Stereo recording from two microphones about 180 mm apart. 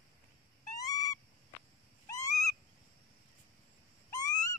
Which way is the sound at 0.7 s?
20° left (ahead or behind).